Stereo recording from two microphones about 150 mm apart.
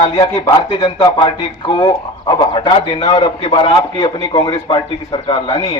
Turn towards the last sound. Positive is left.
turn(degrees=30)  # may be behind; listen again after turning